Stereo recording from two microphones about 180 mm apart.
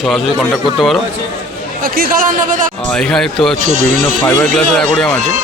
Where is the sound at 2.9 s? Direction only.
5° left (ahead or behind).